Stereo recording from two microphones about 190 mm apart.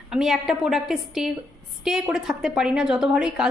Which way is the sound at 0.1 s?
Centre (ahead or behind).